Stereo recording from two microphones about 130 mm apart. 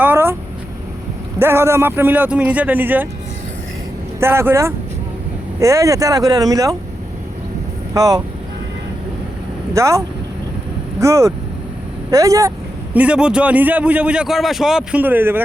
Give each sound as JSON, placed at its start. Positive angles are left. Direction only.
{"t": 0.0, "sound": "vehicle", "side_deg": -15}
{"t": 1.4, "sound": "a man's voice", "side_deg": -20}
{"t": 4.2, "sound": "speech", "side_deg": -15}
{"t": 7.9, "sound": "speech", "side_deg": -30}
{"t": 9.7, "sound": "speech", "side_deg": -25}
{"t": 11.0, "sound": "speech", "side_deg": -25}
{"t": 12.9, "sound": "a man's voice", "side_deg": -10}